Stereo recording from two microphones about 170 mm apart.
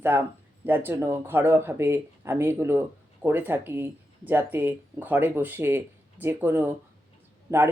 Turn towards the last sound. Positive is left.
turn(degrees=-15)  # may be behind; listen again after turning